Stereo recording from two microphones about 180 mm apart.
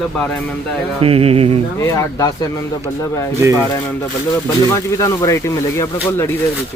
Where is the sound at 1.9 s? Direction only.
20° left (ahead or behind).